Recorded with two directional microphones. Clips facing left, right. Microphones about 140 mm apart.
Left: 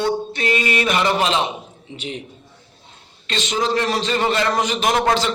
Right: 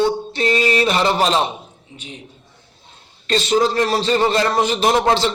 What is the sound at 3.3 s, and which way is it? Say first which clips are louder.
A man's voice: right 5 dB; 40° right (ahead or behind).